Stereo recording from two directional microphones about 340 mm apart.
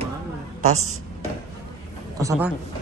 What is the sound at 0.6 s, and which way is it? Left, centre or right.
Speech, right.